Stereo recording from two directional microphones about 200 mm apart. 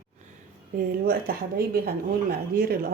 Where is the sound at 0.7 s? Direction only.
50° right (ahead or behind).